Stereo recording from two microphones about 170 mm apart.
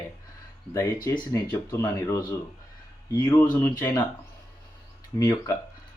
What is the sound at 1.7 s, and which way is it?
Speech, 20° left (ahead or behind).